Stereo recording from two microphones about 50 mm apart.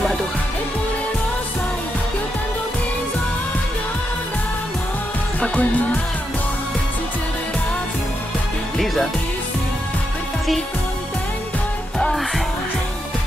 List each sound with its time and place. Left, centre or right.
5.4 s music: left
8.7 s music: centre